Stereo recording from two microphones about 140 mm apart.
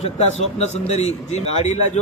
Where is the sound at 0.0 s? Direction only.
50° left (ahead or behind).